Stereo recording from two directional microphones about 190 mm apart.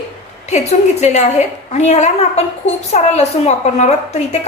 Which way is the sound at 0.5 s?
35° left (ahead or behind).